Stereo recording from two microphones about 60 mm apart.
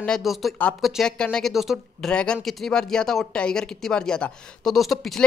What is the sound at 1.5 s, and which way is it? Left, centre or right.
Speech, centre.